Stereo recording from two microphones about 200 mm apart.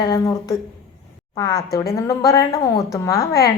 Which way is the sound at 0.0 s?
20° left (ahead or behind).